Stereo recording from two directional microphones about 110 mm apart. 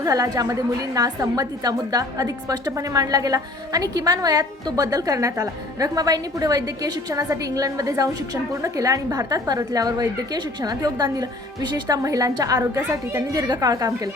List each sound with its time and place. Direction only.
0.0 s a woman's voice: 35° right (ahead or behind)